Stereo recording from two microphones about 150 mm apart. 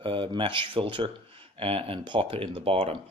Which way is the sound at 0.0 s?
35° right (ahead or behind).